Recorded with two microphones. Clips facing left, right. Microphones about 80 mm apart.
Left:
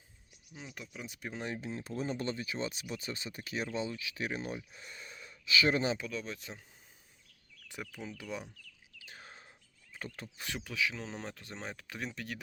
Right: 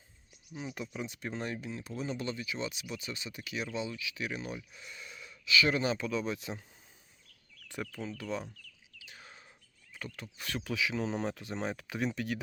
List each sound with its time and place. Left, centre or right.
0.5 s speech: centre
1.0 s speech: centre
1.6 s speech: left
6.0 s speech: centre
7.7 s speech: centre
9.0 s bird: left
9.9 s speech: left
10.6 s speech: centre